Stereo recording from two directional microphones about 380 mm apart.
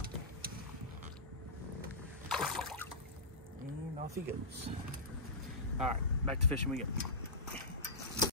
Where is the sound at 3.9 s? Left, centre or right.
Centre.